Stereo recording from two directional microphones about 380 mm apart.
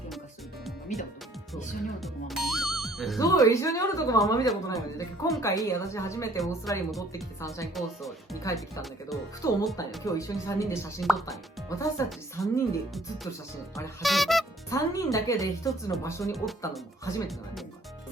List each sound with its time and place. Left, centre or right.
0.9 s speech: centre
2.0 s speech: centre